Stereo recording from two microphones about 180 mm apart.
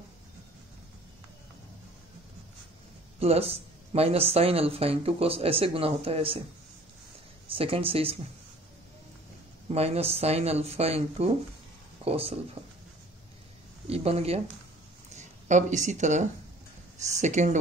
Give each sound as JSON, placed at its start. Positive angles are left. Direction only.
{"t": 3.2, "sound": "speech", "side_deg": -35}
{"t": 7.4, "sound": "speech", "side_deg": -30}
{"t": 9.7, "sound": "speech", "side_deg": -35}
{"t": 12.6, "sound": "a sound", "side_deg": -30}
{"t": 13.8, "sound": "speech", "side_deg": -35}